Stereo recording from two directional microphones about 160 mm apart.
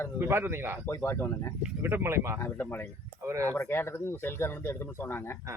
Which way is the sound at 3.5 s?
15° left (ahead or behind).